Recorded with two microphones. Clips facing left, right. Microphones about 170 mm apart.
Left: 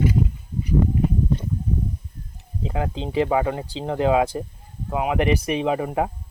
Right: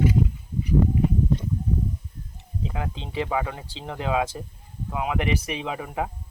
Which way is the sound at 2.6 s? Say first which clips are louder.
Left 6 dB; 35° left (ahead or behind).